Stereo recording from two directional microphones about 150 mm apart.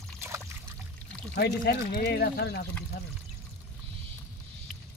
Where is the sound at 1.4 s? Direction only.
90° left.